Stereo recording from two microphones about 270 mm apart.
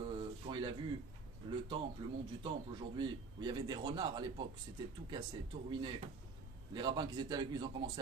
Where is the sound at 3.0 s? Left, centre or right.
Centre.